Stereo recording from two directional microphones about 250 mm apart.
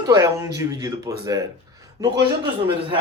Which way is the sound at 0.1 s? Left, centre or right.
Centre.